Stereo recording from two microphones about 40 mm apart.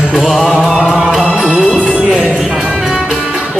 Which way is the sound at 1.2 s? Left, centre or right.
Centre.